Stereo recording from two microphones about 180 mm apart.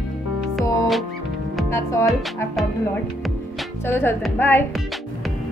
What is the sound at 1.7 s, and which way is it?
Speech, 15° left (ahead or behind).